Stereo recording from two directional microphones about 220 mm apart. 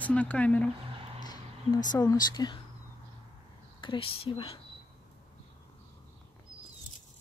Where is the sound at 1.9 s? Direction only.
20° left (ahead or behind).